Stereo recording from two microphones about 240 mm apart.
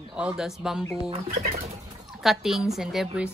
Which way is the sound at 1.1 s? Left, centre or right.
Right.